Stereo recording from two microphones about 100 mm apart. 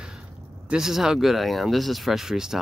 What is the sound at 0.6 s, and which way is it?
Speech, 5° right (ahead or behind).